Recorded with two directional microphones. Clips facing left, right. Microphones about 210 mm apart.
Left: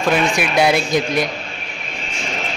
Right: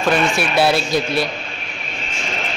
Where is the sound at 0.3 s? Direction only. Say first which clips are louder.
Left 1 dB; 15° left (ahead or behind).